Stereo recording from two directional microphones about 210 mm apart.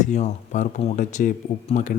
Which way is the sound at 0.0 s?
35° left (ahead or behind).